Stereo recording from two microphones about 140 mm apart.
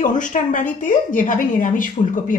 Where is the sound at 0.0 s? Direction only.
65° left (ahead or behind).